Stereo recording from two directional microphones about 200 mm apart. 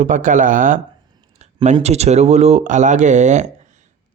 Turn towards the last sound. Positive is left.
turn(degrees=-35)  # may be behind; listen again after turning